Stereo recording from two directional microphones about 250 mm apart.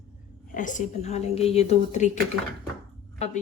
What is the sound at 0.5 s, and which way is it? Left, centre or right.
A woman's voice, left.